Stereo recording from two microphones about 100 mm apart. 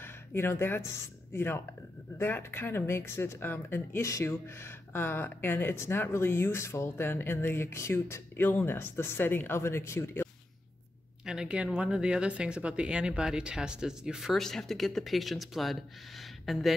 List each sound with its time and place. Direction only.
0.0 s speech: 25° left (ahead or behind)
11.2 s speech: 10° right (ahead or behind)